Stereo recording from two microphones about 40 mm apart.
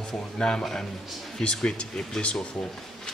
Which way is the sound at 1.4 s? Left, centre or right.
Left.